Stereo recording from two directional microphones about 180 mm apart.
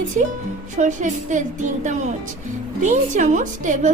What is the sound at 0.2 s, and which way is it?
A woman's voice, 40° right (ahead or behind).